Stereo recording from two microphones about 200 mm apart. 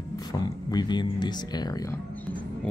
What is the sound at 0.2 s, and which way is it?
Speech, 20° left (ahead or behind).